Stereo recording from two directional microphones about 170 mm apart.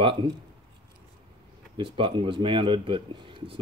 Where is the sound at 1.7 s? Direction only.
30° right (ahead or behind).